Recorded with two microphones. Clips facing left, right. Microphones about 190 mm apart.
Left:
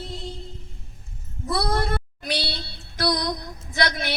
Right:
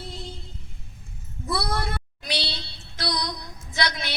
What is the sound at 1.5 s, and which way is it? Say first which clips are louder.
Child singing: left 4 dB; 45° left (ahead or behind).